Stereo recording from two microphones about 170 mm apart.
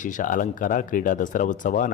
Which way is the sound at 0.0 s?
50° left (ahead or behind).